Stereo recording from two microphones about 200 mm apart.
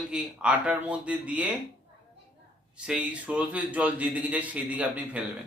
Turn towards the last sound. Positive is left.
turn(degrees=-5)  # may be behind; listen again after turning